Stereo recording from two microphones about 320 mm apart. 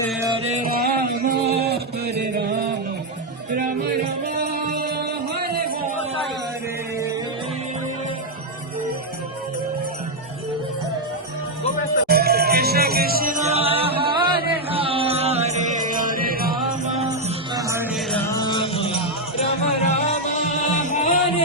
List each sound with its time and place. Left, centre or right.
0.4 s music: right
4.4 s music: right
12.0 s music: right; by 21.1 s left